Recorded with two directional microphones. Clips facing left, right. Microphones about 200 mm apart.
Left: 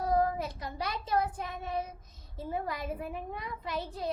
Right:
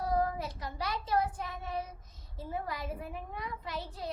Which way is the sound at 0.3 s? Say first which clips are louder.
Left 2 dB; 20° left (ahead or behind).